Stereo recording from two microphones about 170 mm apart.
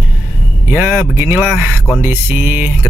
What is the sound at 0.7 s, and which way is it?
Speech, 10° right (ahead or behind).